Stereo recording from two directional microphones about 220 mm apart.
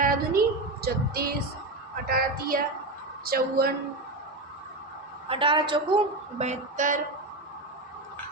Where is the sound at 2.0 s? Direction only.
40° right (ahead or behind).